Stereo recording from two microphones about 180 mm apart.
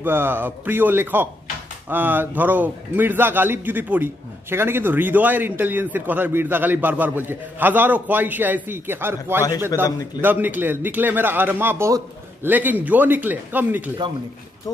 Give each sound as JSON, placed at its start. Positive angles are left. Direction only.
{"t": 0.0, "sound": "a man's voice", "side_deg": -10}
{"t": 9.8, "sound": "a man's voice", "side_deg": 20}
{"t": 10.2, "sound": "a man's voice", "side_deg": -10}